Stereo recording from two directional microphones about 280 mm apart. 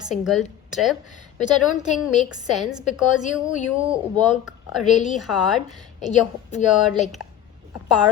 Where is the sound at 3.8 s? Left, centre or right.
Centre.